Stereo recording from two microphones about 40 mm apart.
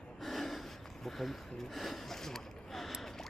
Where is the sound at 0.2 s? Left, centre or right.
Centre.